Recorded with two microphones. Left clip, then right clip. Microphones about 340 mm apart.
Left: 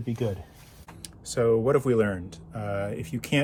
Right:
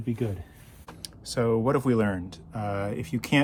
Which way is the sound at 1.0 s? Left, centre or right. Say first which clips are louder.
Left 3 dB; centre.